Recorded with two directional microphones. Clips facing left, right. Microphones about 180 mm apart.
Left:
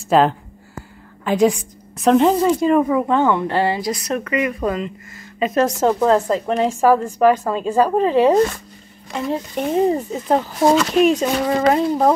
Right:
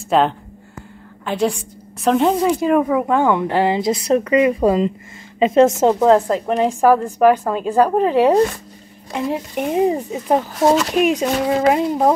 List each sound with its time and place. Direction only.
0.1 s a woman's voice: centre (ahead or behind)